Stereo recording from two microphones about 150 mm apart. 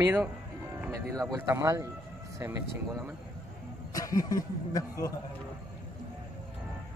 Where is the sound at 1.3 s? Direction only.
20° right (ahead or behind).